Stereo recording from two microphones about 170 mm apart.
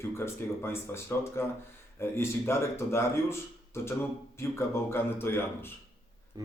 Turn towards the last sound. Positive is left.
turn(degrees=-20)  # may be behind; listen again after turning